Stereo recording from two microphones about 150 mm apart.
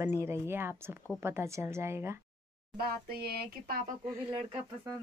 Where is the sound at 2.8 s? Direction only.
90° right.